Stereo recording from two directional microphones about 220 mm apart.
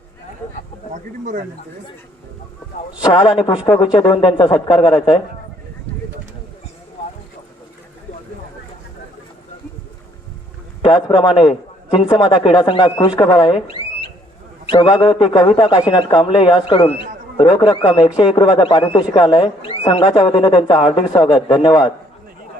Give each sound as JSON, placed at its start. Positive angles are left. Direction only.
{"t": 1.2, "sound": "speech", "side_deg": -35}
{"t": 3.0, "sound": "a man's voice", "side_deg": 20}
{"t": 10.8, "sound": "a man's voice", "side_deg": 20}